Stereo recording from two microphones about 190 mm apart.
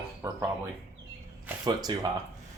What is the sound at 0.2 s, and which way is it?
Speech, 15° right (ahead or behind).